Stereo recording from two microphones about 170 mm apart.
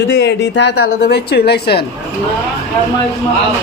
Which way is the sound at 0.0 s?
85° left.